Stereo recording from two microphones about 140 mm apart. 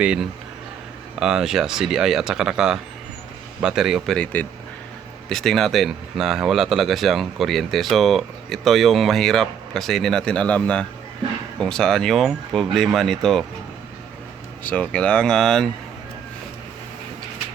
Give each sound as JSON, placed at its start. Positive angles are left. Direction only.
{"t": 0.0, "sound": "a man's voice", "side_deg": -5}
{"t": 14.6, "sound": "speech", "side_deg": 10}